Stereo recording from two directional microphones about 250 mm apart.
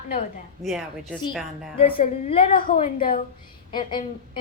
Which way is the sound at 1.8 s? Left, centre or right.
Left.